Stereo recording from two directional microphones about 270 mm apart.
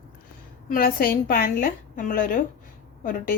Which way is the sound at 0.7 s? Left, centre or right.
Left.